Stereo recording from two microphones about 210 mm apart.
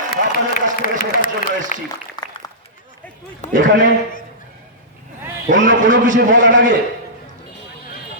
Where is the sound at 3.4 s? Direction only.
30° left (ahead or behind).